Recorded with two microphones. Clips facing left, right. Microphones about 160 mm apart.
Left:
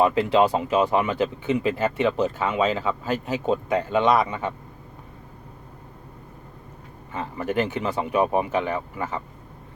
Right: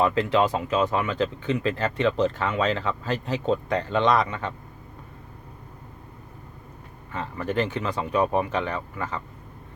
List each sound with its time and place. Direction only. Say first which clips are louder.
0.0 s speech: left 3 dB; 15° left (ahead or behind)
7.1 s speech: left 1 dB; 10° left (ahead or behind)